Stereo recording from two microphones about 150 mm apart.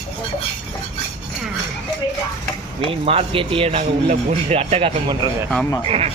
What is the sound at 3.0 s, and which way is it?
Speech, 40° right (ahead or behind).